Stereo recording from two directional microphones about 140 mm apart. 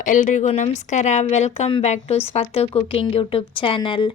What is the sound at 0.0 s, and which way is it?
A woman's voice, 70° left (ahead or behind).